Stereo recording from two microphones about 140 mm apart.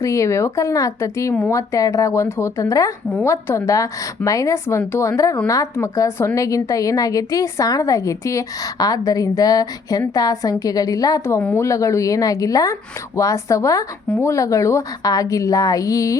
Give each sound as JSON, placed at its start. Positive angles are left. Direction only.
{"t": 0.0, "sound": "a woman's voice", "side_deg": 20}